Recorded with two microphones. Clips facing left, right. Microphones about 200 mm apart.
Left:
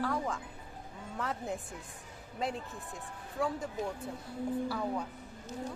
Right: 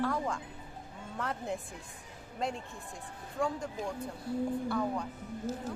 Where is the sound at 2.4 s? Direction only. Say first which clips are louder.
Even; centre (ahead or behind).